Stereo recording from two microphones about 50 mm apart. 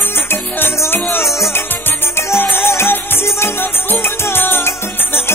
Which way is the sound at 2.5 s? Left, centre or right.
Left.